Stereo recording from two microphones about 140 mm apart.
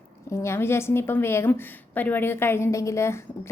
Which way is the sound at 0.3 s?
20° left (ahead or behind).